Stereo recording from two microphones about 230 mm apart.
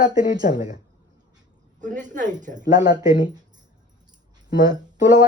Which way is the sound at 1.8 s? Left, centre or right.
Right.